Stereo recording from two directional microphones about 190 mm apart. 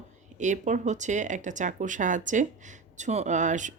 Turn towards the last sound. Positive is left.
turn(degrees=-40)  # may be behind; listen again after turning